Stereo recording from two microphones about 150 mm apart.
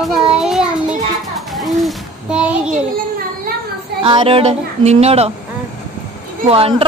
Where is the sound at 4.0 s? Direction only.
35° right (ahead or behind).